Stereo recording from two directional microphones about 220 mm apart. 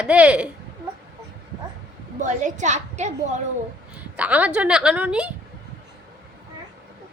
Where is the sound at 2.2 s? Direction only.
35° right (ahead or behind).